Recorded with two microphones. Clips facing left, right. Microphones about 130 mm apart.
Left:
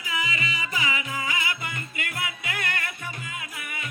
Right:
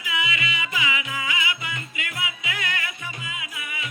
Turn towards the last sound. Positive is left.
turn(degrees=45)  # may be behind; listen again after turning